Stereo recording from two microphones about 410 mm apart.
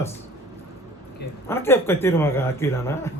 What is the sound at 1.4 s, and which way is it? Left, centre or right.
Speech, centre.